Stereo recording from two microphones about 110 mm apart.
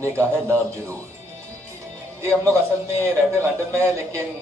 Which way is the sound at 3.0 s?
25° right (ahead or behind).